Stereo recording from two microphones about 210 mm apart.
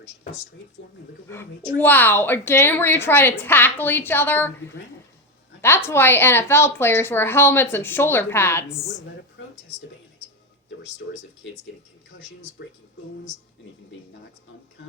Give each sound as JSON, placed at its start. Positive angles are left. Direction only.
{"t": 1.8, "sound": "a woman's voice", "side_deg": 10}
{"t": 5.6, "sound": "a woman's voice", "side_deg": 10}
{"t": 9.4, "sound": "a sound", "side_deg": 60}